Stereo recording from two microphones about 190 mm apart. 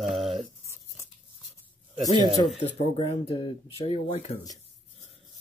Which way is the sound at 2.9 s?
25° left (ahead or behind).